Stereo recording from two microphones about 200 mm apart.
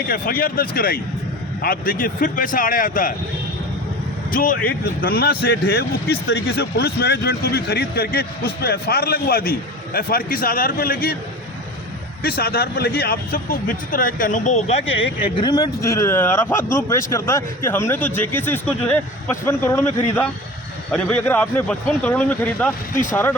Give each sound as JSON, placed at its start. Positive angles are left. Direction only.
{"t": 0.1, "sound": "speech", "side_deg": 45}
{"t": 4.3, "sound": "speech", "side_deg": 45}
{"t": 12.4, "sound": "speech", "side_deg": 50}
{"t": 15.2, "sound": "speech", "side_deg": 20}